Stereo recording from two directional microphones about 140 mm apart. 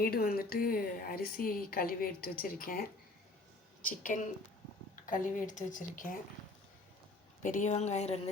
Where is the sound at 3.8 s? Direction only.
70° left (ahead or behind).